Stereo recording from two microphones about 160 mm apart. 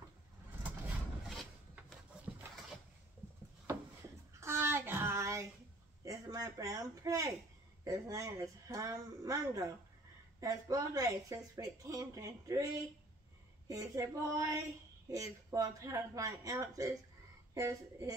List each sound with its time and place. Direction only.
1.3 s wood: centre (ahead or behind)
4.4 s a sound: 15° right (ahead or behind)
7.8 s speech: 20° right (ahead or behind)